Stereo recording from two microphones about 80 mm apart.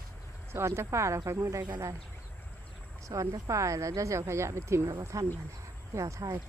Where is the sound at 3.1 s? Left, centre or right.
Right.